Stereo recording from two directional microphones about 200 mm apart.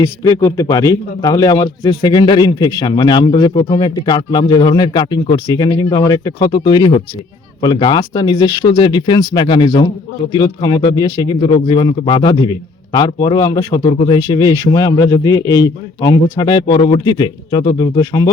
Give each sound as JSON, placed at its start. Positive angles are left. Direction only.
{"t": 0.0, "sound": "speech", "side_deg": 15}